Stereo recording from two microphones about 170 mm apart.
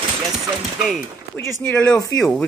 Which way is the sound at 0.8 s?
Centre (ahead or behind).